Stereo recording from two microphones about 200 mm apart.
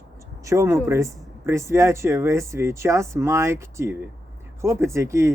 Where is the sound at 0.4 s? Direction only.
15° right (ahead or behind).